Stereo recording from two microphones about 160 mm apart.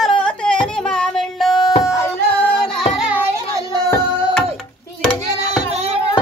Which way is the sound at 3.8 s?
15° left (ahead or behind).